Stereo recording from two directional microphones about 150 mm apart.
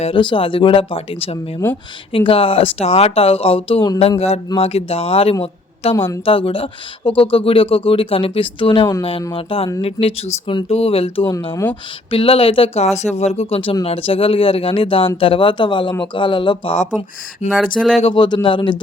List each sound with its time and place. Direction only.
0.0 s speech: 35° left (ahead or behind)
1.6 s a woman's voice: 15° left (ahead or behind)
2.1 s speech: 35° left (ahead or behind)
5.9 s a woman's voice: 15° left (ahead or behind)
6.2 s speech: 35° left (ahead or behind)
11.2 s speech: 20° left (ahead or behind)
11.7 s speech: 35° left (ahead or behind)
17.4 s speech: 50° left (ahead or behind)
17.7 s speech: centre (ahead or behind)
18.0 s speech: 30° left (ahead or behind)